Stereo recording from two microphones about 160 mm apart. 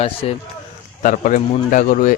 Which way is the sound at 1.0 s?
50° left (ahead or behind).